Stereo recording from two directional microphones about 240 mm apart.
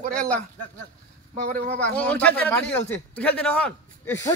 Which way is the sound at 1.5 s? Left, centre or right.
Right.